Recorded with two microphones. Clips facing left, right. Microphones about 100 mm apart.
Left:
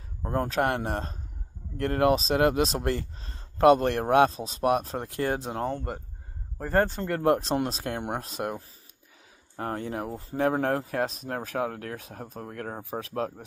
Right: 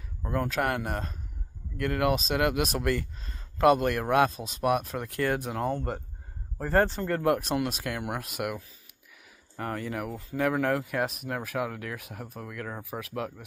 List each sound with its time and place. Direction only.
0.2 s speech: 35° left (ahead or behind)